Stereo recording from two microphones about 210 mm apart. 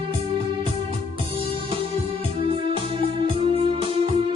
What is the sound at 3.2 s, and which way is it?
Music, 25° right (ahead or behind).